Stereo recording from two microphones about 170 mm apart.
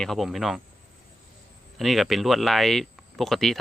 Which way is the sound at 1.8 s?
Centre (ahead or behind).